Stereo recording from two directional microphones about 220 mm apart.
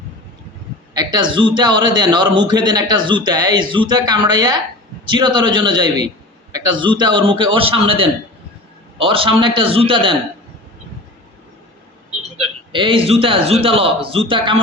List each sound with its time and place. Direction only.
0.9 s a man's voice: 20° right (ahead or behind)
12.7 s a man's voice: 25° right (ahead or behind)